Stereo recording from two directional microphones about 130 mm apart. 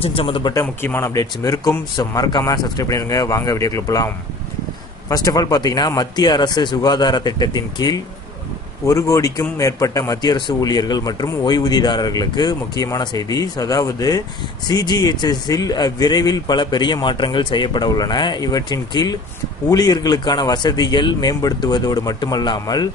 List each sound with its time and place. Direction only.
0.0 s speech: 45° left (ahead or behind)
0.4 s speech: 30° left (ahead or behind)
0.8 s speech: 15° left (ahead or behind)
1.1 s a man's voice: 25° left (ahead or behind)
5.1 s a man's voice: 30° left (ahead or behind)